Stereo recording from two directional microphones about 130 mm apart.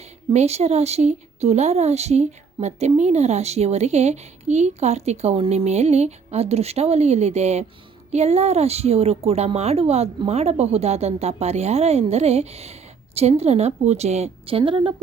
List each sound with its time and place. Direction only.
0.3 s a woman's voice: 55° right (ahead or behind); by 14.9 s 40° right (ahead or behind)